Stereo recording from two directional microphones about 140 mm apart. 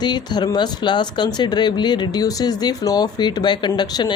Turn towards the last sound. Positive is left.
turn(degrees=30)  # may be behind; listen again after turning